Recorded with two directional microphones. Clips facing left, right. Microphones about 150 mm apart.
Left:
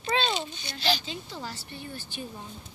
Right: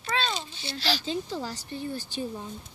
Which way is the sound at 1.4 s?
40° right (ahead or behind).